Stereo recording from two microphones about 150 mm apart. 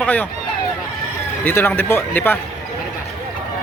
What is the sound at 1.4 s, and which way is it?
Speech, 15° left (ahead or behind).